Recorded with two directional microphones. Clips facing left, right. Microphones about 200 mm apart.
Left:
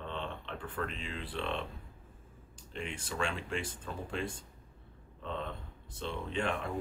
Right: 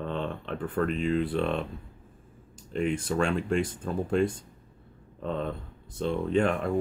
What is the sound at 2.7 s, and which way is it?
Speech, 45° right (ahead or behind).